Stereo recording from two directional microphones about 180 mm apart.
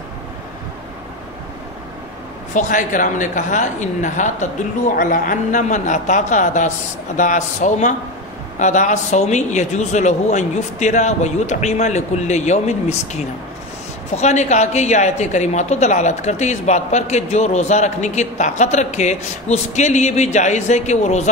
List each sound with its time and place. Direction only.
2.5 s a woman's voice: 45° left (ahead or behind)